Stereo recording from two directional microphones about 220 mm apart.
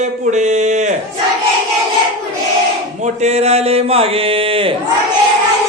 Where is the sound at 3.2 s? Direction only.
30° right (ahead or behind).